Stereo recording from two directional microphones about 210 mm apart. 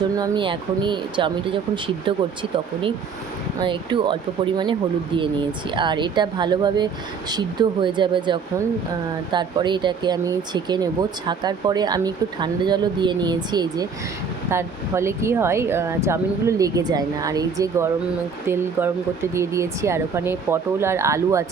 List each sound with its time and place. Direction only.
0.2 s speech: 25° right (ahead or behind)